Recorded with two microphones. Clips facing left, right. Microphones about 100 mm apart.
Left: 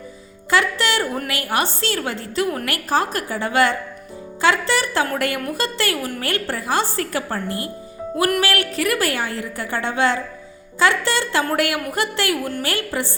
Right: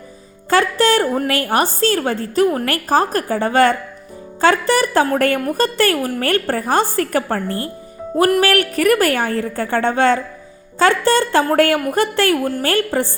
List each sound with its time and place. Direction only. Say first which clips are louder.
0.5 s a woman's voice: right 5 dB; 45° right (ahead or behind)
7.4 s a woman's voice: right 3 dB; 15° left (ahead or behind)
8.1 s a woman's voice: right 6 dB; 40° right (ahead or behind)
12.3 s a woman's voice: right 6 dB; 35° right (ahead or behind)